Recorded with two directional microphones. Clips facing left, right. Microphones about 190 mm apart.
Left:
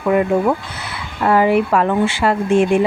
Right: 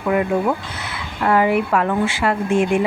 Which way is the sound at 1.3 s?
30° left (ahead or behind).